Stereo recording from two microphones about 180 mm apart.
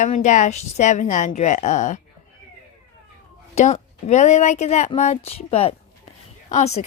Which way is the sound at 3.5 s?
40° left (ahead or behind).